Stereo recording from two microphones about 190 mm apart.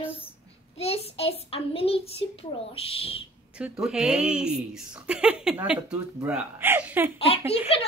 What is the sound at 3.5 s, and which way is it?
Speech, 5° right (ahead or behind).